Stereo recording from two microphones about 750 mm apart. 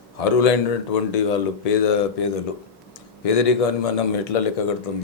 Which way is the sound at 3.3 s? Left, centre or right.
Left.